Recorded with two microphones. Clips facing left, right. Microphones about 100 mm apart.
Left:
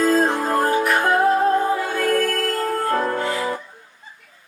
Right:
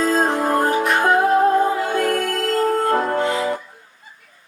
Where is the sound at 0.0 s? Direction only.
20° right (ahead or behind).